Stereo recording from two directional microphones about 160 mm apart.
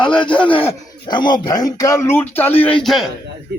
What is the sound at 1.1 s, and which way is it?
Speech, 30° left (ahead or behind).